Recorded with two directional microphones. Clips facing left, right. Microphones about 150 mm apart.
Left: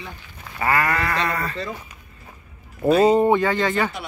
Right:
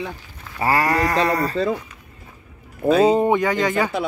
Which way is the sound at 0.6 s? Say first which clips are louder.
Right 3 dB; 30° right (ahead or behind).